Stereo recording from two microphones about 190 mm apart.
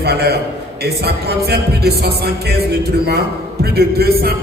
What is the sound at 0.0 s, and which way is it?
Speech, 60° right (ahead or behind).